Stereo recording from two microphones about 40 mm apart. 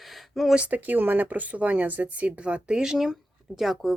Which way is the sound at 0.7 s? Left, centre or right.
Right.